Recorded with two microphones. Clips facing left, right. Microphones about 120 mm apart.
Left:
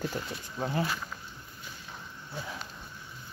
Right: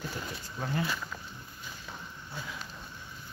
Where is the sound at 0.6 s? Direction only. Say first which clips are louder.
Left 2 dB; 30° left (ahead or behind).